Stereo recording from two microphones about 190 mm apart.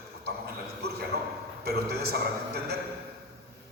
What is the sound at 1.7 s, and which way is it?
A man's voice, 55° right (ahead or behind).